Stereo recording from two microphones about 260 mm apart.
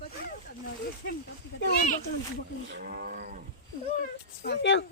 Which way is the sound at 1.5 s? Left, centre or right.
Left.